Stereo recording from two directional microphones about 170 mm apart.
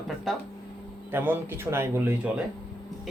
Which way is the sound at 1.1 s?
10° right (ahead or behind).